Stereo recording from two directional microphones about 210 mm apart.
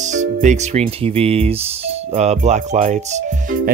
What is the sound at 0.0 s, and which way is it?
Speech, 35° right (ahead or behind).